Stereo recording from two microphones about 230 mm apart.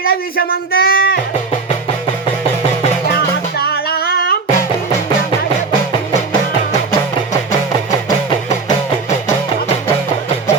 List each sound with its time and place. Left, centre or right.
0.0 s speech: left
3.6 s humming: left